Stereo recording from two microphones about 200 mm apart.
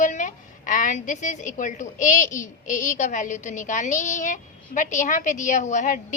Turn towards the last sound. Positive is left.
turn(degrees=40)  # may be behind; listen again after turning